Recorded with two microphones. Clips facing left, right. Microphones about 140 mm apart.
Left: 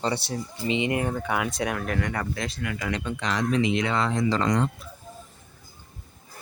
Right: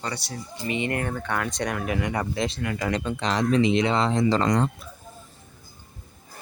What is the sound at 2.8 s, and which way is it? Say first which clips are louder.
Speech: right 4 dB; 35° right (ahead or behind).